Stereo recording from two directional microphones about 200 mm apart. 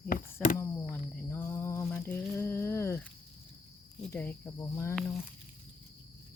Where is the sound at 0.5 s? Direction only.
10° left (ahead or behind).